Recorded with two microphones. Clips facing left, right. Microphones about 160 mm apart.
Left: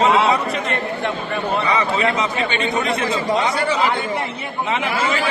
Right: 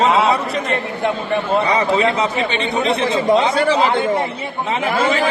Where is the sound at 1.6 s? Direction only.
35° right (ahead or behind).